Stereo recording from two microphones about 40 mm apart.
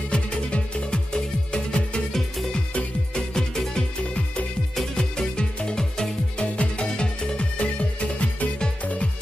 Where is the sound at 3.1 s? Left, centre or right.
Centre.